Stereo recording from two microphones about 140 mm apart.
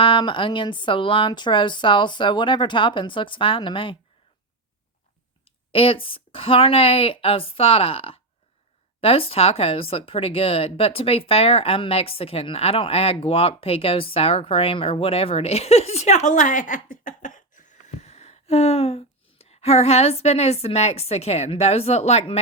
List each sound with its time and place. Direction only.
0.0 s speech: 35° left (ahead or behind)
5.5 s speech: 40° left (ahead or behind)